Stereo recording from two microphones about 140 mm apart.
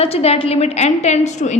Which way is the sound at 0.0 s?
45° left (ahead or behind).